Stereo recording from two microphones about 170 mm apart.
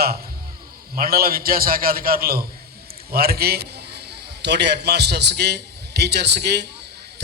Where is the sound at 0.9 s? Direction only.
60° right (ahead or behind).